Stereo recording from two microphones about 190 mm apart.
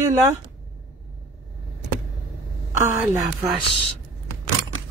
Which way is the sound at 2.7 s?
15° right (ahead or behind).